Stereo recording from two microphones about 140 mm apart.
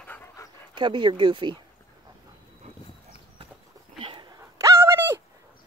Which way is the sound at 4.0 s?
40° right (ahead or behind).